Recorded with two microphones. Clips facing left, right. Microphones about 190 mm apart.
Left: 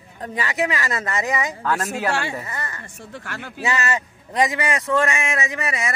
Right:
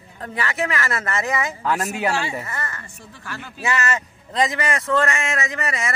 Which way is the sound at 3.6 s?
20° left (ahead or behind).